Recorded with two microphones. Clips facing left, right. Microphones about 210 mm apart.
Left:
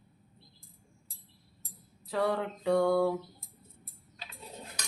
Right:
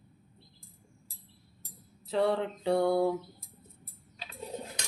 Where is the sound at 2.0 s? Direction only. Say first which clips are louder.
Right 2 dB; 25° right (ahead or behind).